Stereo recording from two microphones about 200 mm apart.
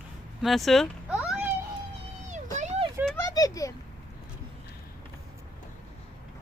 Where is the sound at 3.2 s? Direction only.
15° left (ahead or behind).